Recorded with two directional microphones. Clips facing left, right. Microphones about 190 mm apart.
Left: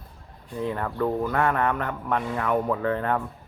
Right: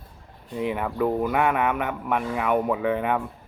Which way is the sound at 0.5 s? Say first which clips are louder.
Right 2 dB; 15° right (ahead or behind).